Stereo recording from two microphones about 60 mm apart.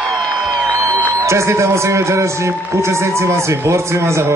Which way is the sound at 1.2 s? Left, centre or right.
Right.